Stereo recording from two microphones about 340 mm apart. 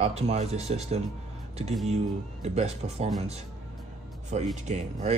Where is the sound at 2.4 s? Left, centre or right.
Centre.